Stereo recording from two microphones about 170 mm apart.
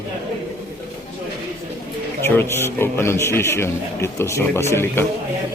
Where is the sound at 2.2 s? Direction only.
15° left (ahead or behind).